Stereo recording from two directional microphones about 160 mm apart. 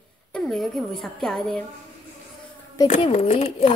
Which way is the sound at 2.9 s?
40° left (ahead or behind).